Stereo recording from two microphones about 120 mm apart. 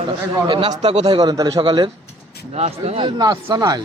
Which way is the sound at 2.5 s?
60° right (ahead or behind).